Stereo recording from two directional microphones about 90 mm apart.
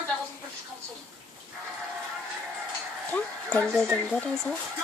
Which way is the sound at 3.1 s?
15° left (ahead or behind).